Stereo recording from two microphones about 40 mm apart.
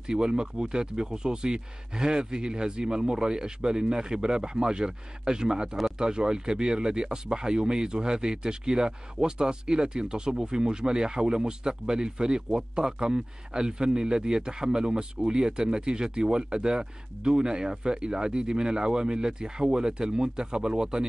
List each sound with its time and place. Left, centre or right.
0.0 s speech: centre